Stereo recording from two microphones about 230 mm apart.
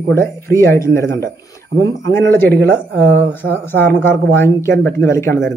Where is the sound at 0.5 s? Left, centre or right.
Centre.